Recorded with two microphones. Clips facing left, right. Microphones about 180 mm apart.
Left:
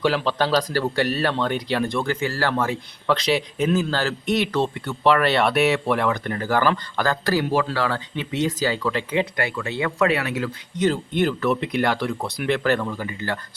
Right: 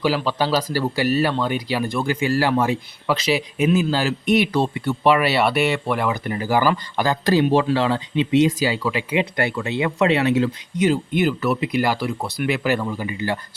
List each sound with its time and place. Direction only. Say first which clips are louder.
0.0 s speech: even; 5° right (ahead or behind)
9.3 s speech: right 3 dB; 25° right (ahead or behind)
10.8 s speech: right 2 dB; 10° right (ahead or behind)